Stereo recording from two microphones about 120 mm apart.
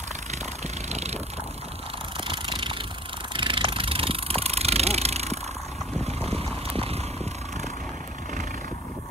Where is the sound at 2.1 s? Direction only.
45° right (ahead or behind).